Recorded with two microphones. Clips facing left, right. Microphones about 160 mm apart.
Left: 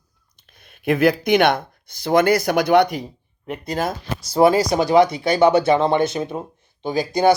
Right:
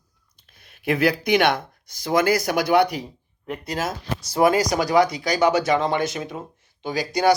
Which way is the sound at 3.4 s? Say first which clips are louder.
Left 3 dB; 20° left (ahead or behind).